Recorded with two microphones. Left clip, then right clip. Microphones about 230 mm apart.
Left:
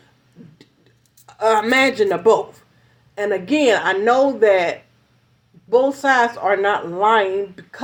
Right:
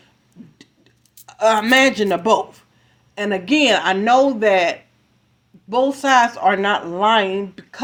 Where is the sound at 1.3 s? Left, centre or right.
Right.